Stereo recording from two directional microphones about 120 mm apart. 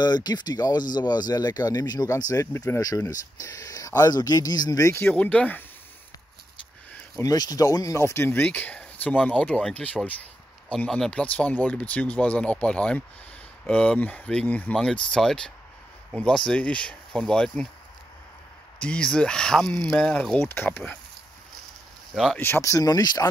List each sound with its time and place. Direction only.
0.0 s speech: 35° left (ahead or behind)
5.1 s speech: 10° left (ahead or behind)
7.2 s speech: 30° left (ahead or behind); by 17.6 s 5° left (ahead or behind)
18.8 s speech: 10° left (ahead or behind)
20.3 s speech: 20° left (ahead or behind)
22.1 s speech: 5° left (ahead or behind)
22.4 s speech: 20° left (ahead or behind)